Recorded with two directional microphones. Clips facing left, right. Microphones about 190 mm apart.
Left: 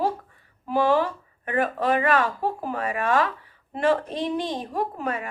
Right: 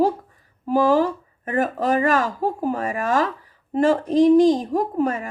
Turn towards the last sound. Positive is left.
turn(degrees=-40)  # may be behind; listen again after turning